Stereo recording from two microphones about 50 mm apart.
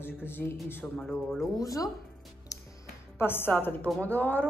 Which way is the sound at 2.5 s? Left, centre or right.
Left.